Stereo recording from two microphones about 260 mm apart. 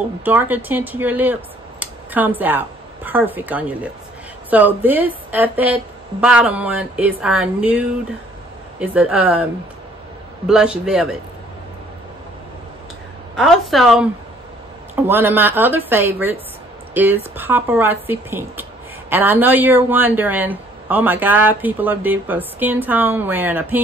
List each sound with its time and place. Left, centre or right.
0.2 s a woman's voice: centre
13.4 s a woman's voice: centre